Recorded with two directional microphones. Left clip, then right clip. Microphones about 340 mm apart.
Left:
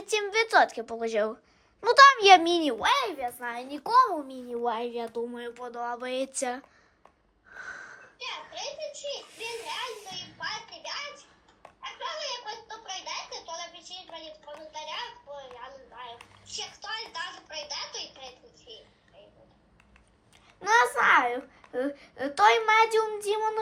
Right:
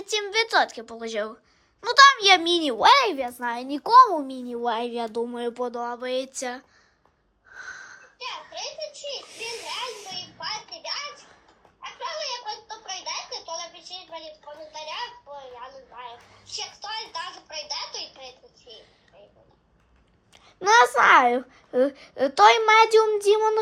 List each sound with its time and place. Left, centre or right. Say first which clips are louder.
0.0 s speech: right 2 dB; centre
2.8 s a child's voice: right 8 dB; right
5.1 s speech: right 6 dB; centre
7.5 s wheeze: right 2 dB; centre
8.2 s children playing: right 3 dB; right
11.8 s a sound: right 3 dB; right
20.3 s a child's voice: right 5 dB; centre